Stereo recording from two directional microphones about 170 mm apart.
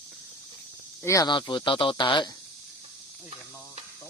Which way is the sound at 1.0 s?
20° left (ahead or behind).